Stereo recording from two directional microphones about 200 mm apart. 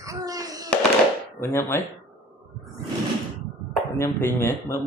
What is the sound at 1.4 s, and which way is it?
Speech, 10° left (ahead or behind).